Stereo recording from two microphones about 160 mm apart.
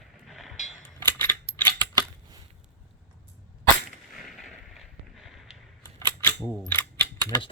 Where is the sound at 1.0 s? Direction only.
15° left (ahead or behind).